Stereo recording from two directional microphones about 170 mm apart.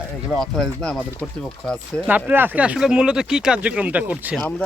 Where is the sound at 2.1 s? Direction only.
10° right (ahead or behind).